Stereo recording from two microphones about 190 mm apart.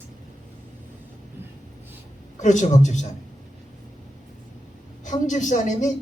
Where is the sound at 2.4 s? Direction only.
40° left (ahead or behind).